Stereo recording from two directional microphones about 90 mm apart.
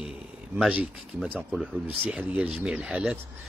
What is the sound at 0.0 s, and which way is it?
Speech, 5° right (ahead or behind).